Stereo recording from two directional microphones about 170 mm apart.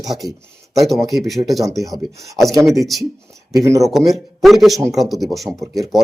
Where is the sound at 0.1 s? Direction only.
Centre (ahead or behind).